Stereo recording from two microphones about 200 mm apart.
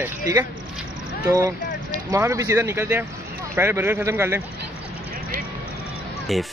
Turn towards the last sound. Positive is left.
turn(degrees=0)  # may be behind; listen again after turning